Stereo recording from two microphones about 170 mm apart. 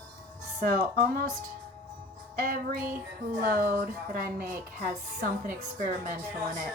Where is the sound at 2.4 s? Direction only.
55° right (ahead or behind).